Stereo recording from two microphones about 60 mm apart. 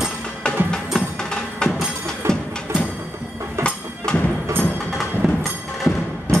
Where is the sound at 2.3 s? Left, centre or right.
Right.